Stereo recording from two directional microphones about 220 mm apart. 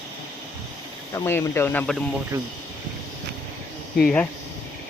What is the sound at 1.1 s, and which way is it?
Speech, 15° left (ahead or behind).